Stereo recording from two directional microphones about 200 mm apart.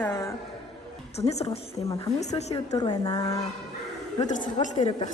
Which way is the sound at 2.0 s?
35° left (ahead or behind).